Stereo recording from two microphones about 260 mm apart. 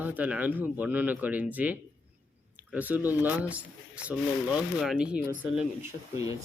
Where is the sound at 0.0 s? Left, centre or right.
Centre.